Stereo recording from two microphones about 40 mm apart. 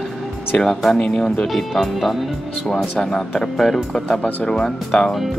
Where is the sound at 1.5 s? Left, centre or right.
Centre.